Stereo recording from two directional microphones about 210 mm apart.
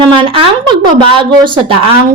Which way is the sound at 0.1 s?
25° right (ahead or behind).